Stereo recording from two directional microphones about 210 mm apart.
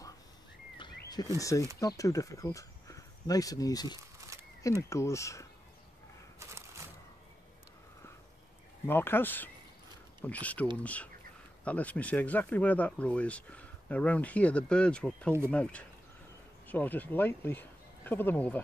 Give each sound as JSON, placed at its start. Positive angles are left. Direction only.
{"t": 0.7, "sound": "a sound", "side_deg": 20}
{"t": 1.8, "sound": "speech", "side_deg": 15}
{"t": 4.3, "sound": "a sound", "side_deg": -15}
{"t": 4.6, "sound": "speech", "side_deg": 15}
{"t": 6.4, "sound": "bird", "side_deg": -15}
{"t": 8.8, "sound": "speech", "side_deg": 10}